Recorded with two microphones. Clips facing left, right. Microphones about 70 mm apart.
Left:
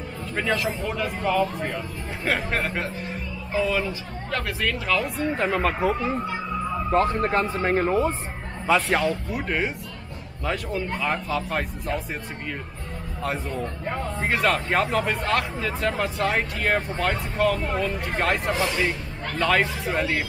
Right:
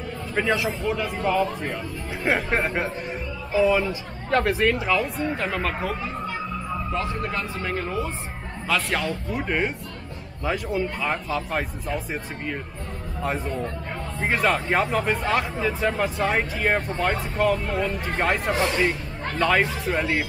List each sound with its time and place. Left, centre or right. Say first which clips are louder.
0.3 s speech: right 2 dB; centre
2.3 s speech: right 2 dB; right
3.5 s speech: right 4 dB; centre
4.3 s speech: right 7 dB; right
4.8 s speech: right 1 dB; centre
6.9 s speech: left 8 dB; left
8.9 s speech: left 3 dB; centre